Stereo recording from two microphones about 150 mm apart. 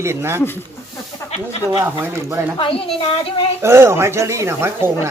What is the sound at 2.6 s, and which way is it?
Speech, 40° left (ahead or behind).